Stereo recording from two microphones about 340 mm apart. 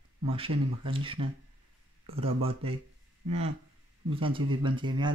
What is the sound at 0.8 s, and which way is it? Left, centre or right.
Speech, centre.